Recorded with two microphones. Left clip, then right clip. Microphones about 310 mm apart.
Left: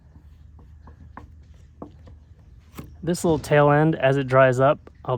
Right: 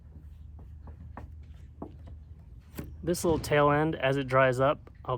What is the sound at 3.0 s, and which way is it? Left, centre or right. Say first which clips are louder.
Speech: left 6 dB; left.